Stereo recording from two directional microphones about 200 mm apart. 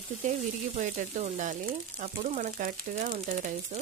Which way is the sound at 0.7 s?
40° right (ahead or behind).